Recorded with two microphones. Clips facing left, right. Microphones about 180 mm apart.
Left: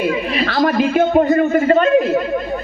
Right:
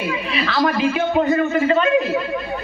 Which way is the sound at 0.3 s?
50° left (ahead or behind).